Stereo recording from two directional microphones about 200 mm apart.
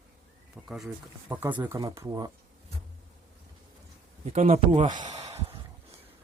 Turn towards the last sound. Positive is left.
turn(degrees=-20)  # may be behind; listen again after turning